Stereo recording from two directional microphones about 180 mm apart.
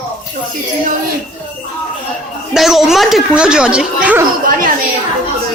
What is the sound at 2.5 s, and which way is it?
Speech, centre (ahead or behind).